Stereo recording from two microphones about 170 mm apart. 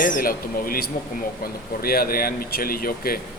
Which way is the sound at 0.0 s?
55° left (ahead or behind).